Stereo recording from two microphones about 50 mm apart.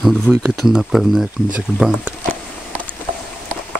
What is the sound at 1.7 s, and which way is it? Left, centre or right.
Speech, centre.